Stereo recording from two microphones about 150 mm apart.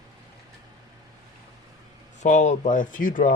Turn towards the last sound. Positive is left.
turn(degrees=60)  # may be behind; listen again after turning